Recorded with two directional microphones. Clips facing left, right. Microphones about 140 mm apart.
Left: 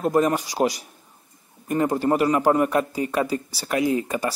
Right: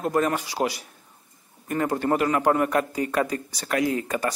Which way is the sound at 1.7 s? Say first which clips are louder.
Left 3 dB; 15° left (ahead or behind).